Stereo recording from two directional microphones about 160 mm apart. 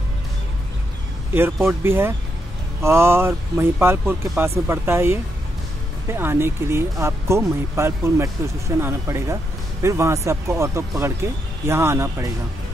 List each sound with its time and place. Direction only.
1.3 s speech: 15° right (ahead or behind)